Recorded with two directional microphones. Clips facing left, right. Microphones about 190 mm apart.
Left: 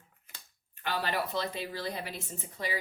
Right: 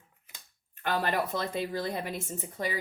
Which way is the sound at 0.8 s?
50° right (ahead or behind).